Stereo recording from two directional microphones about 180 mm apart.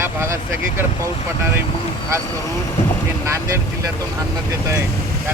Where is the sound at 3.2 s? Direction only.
15° right (ahead or behind).